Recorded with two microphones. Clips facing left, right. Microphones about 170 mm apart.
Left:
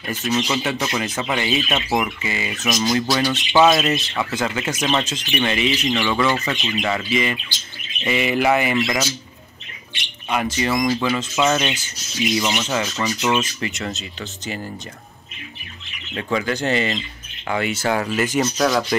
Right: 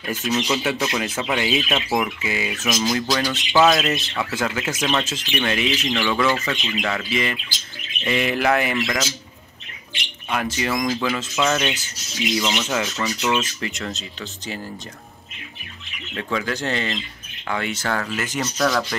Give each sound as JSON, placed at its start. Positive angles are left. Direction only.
{"t": 0.2, "sound": "speech", "side_deg": 0}
{"t": 10.3, "sound": "speech", "side_deg": 0}
{"t": 16.2, "sound": "speech", "side_deg": 5}